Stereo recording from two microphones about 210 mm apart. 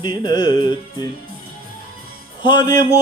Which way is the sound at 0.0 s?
20° left (ahead or behind).